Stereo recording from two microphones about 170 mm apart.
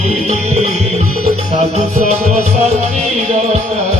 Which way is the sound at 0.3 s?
40° right (ahead or behind).